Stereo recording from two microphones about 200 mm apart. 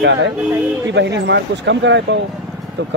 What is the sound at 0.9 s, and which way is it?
Speech, 60° right (ahead or behind).